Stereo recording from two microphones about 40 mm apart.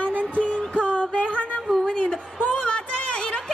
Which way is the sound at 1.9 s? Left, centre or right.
Left.